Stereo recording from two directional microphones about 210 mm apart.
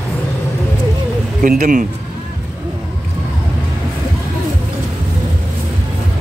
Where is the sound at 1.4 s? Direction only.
40° right (ahead or behind).